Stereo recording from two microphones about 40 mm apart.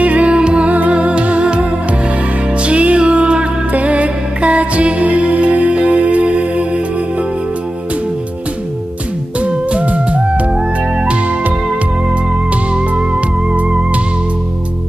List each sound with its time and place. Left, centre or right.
0.0 s music: right
9.4 s music: right
12.7 s music: right